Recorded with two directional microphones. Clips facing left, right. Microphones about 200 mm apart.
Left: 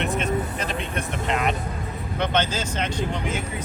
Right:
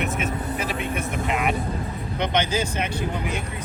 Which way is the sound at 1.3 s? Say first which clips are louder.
Even; 5° right (ahead or behind).